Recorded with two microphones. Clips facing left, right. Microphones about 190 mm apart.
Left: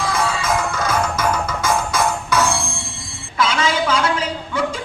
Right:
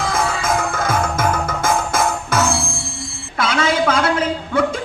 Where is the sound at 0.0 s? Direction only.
50° right (ahead or behind).